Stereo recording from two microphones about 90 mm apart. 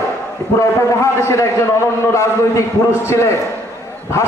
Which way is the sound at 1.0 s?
30° left (ahead or behind).